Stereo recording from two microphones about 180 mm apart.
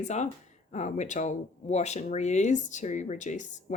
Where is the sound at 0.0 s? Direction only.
40° left (ahead or behind).